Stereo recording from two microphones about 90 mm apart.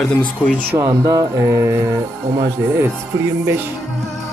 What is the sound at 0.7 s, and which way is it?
Music, 40° right (ahead or behind).